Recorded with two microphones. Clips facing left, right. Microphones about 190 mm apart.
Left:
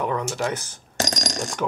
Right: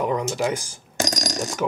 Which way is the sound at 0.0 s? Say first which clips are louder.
Right 2 dB; 15° right (ahead or behind).